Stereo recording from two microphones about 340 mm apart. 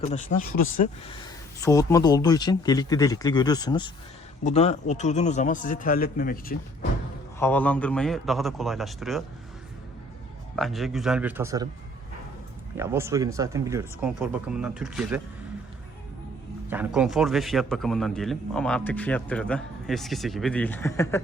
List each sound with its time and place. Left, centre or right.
0.0 s a man's voice: left
7.3 s a man's voice: centre
10.5 s a man's voice: centre
12.7 s speech: centre
16.6 s a man's voice: centre